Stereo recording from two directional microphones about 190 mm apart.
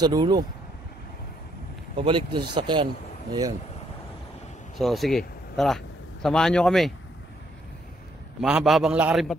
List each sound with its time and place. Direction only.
0.0 s speech: 20° right (ahead or behind)
2.0 s speech: 25° right (ahead or behind)
4.7 s speech: centre (ahead or behind)
8.4 s a man's voice: 5° right (ahead or behind)